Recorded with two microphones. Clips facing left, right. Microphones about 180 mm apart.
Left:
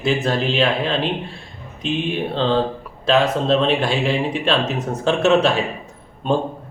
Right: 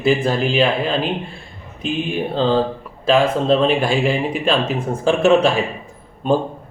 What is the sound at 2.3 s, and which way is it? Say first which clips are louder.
Speech: right 3 dB; 5° right (ahead or behind).